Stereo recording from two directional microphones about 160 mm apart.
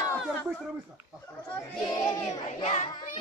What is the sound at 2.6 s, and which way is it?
Child singing, 45° left (ahead or behind).